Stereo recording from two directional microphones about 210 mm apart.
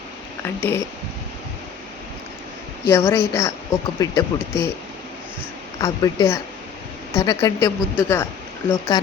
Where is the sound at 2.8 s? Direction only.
15° left (ahead or behind).